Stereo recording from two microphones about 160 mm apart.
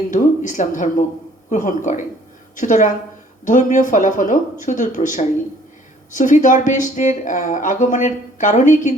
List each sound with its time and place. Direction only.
0.1 s speech: 55° left (ahead or behind)